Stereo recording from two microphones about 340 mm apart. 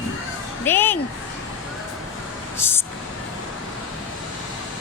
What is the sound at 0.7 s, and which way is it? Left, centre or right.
Speech, centre.